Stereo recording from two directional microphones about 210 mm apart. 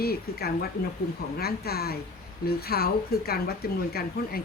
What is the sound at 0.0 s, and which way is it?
Speech, 45° left (ahead or behind).